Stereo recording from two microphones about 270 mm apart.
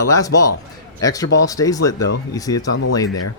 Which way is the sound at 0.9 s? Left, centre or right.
Centre.